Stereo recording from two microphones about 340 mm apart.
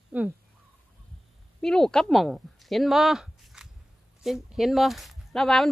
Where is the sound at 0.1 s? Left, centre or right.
Centre.